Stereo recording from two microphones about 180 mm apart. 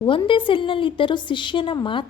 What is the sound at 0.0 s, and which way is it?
A woman's voice, 30° left (ahead or behind).